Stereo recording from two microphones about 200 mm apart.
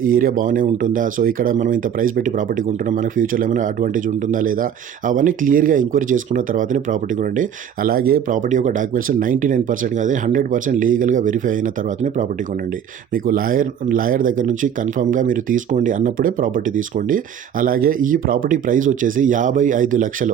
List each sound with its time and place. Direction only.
0.0 s speech: 45° right (ahead or behind)
13.2 s speech: 45° right (ahead or behind)